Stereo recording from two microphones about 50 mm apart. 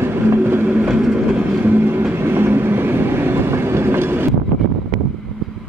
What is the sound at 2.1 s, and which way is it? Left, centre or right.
Train, right.